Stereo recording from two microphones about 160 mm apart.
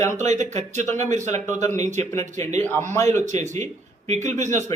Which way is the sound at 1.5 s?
20° left (ahead or behind).